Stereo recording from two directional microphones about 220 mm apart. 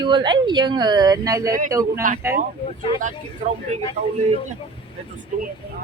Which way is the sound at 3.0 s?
35° right (ahead or behind).